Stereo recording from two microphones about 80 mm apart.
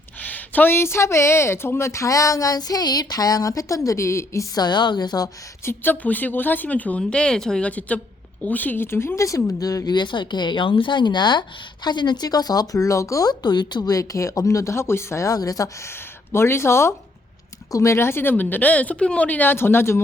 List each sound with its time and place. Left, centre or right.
0.2 s a woman's voice: left
4.5 s speech: left
5.6 s speech: left; by 7.7 s centre
7.7 s a woman's voice: centre; by 13.3 s left
13.4 s speech: left
13.9 s a woman's voice: left
15.9 s speech: left
17.7 s speech: left
17.9 s speech: left